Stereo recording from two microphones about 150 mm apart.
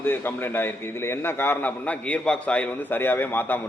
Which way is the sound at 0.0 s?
15° left (ahead or behind).